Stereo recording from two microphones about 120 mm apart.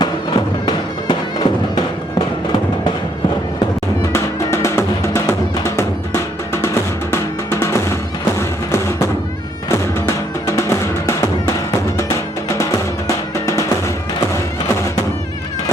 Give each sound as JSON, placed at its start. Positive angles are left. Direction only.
{"t": 0.0, "sound": "music", "side_deg": 40}
{"t": 4.1, "sound": "music", "side_deg": 25}
{"t": 7.1, "sound": "music", "side_deg": 20}
{"t": 10.4, "sound": "music", "side_deg": 25}